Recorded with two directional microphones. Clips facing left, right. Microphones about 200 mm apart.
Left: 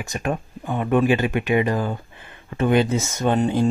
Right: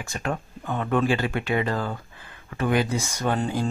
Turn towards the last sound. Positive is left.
turn(degrees=20)  # may be behind; listen again after turning